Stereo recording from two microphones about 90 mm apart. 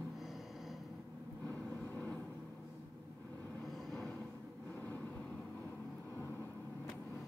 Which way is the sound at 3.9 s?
5° left (ahead or behind).